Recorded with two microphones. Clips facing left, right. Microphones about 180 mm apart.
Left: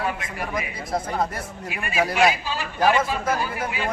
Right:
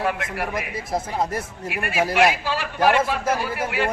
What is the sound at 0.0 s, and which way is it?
Speech, 65° right (ahead or behind).